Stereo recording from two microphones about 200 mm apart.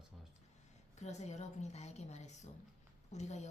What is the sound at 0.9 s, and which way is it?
A woman's voice, 35° left (ahead or behind).